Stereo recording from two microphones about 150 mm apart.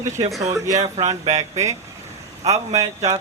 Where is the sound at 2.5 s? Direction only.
25° right (ahead or behind).